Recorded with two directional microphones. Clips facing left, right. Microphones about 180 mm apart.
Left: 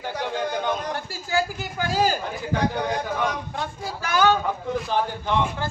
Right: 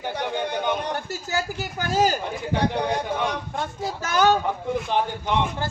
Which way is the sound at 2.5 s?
30° right (ahead or behind).